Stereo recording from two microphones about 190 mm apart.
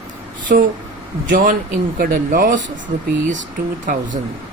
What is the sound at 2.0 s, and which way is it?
Speech, 45° right (ahead or behind).